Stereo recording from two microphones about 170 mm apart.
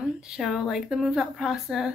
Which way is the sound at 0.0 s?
5° right (ahead or behind).